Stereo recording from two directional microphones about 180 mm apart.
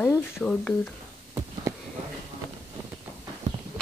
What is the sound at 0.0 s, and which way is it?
Speech, 10° left (ahead or behind).